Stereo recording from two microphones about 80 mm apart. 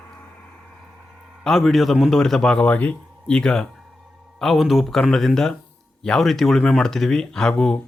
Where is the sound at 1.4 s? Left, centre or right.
Centre.